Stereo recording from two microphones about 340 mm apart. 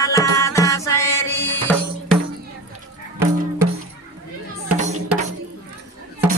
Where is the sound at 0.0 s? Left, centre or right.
Centre.